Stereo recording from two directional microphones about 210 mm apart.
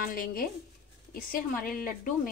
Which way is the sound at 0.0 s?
45° left (ahead or behind).